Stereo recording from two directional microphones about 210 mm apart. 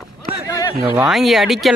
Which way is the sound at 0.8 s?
5° right (ahead or behind).